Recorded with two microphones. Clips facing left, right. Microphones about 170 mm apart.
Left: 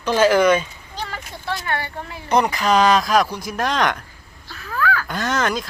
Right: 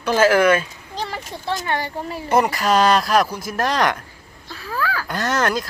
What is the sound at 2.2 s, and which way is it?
Speech, 5° right (ahead or behind).